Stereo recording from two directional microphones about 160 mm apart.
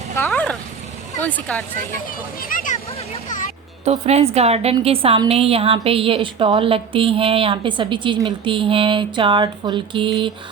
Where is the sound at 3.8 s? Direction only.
40° right (ahead or behind).